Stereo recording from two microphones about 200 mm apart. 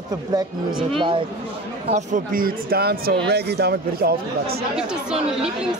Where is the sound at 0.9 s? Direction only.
25° right (ahead or behind).